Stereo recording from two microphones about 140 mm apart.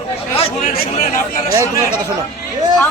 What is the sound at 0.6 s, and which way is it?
Speech, 90° left.